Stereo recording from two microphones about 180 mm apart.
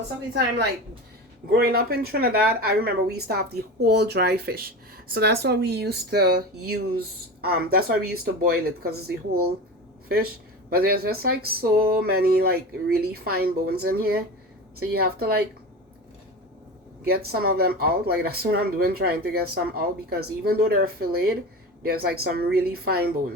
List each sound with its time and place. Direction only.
1.5 s speech: 55° right (ahead or behind)
10.7 s speech: 60° right (ahead or behind)
17.1 s speech: 60° right (ahead or behind)